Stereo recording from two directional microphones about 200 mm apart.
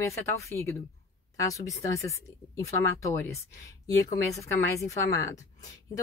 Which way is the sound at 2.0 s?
15° left (ahead or behind).